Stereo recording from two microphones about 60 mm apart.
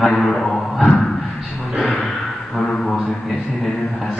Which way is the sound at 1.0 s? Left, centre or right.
Left.